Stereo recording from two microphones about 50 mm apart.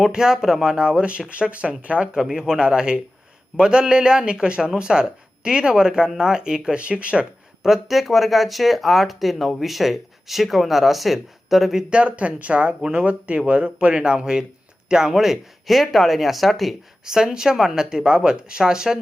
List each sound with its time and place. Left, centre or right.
0.0 s speech: centre
2.1 s speech: centre
7.6 s speech: centre
11.9 s speech: right; by 16.7 s centre
17.1 s speech: centre